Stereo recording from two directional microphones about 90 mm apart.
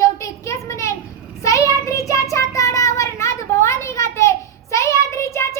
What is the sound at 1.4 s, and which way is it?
Child singing, 35° left (ahead or behind).